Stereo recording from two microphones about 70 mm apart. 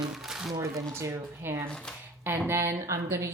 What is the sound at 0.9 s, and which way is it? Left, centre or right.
Speech, right.